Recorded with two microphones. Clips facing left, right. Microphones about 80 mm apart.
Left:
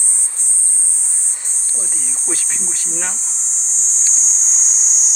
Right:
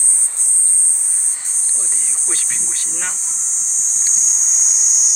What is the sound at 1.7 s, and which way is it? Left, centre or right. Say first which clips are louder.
Speech: left 4 dB; left.